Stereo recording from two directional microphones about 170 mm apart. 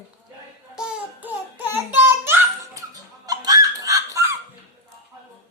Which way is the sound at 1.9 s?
15° right (ahead or behind).